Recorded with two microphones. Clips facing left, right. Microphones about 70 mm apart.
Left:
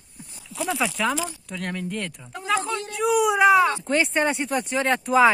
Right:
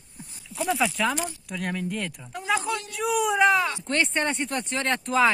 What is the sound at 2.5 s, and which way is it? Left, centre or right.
Speech, left.